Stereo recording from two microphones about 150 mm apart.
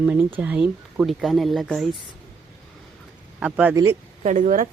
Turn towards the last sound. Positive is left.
turn(degrees=-60)  # may be behind; listen again after turning